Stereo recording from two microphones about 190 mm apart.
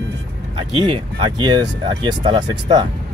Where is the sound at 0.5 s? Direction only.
25° right (ahead or behind).